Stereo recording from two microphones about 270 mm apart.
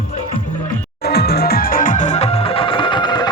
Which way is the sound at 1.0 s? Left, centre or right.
Left.